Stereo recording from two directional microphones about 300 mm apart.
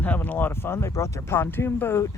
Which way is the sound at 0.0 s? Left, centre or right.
Centre.